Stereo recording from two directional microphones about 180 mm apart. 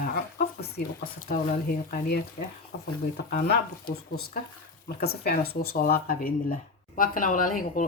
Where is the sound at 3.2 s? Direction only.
60° left (ahead or behind).